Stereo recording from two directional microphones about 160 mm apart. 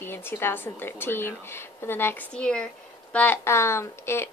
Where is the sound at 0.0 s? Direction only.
15° left (ahead or behind).